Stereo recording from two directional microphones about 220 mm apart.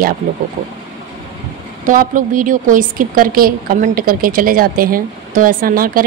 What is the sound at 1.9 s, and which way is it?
A woman's voice, 35° right (ahead or behind).